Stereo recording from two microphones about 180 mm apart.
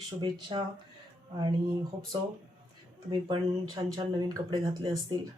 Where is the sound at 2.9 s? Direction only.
25° right (ahead or behind).